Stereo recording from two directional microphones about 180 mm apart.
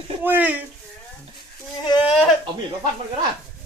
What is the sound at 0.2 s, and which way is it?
Speech, 10° right (ahead or behind).